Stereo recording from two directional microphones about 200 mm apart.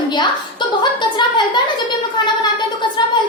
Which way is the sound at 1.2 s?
25° left (ahead or behind).